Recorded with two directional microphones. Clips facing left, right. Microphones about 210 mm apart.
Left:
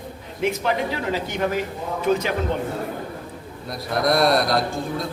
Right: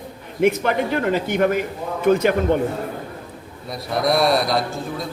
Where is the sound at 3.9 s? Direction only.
Centre (ahead or behind).